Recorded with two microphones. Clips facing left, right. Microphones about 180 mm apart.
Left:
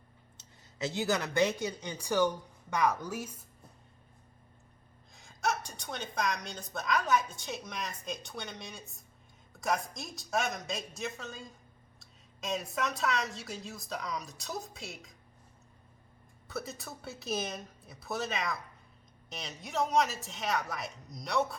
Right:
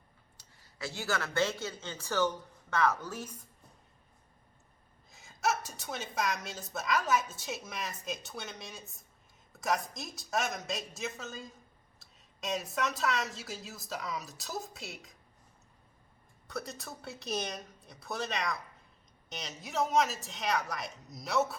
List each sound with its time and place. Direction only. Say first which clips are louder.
0.3 s speech: left 6 dB; 20° left (ahead or behind)
5.1 s a woman's voice: right 1 dB; 5° right (ahead or behind)
16.5 s a woman's voice: left 1 dB; centre (ahead or behind)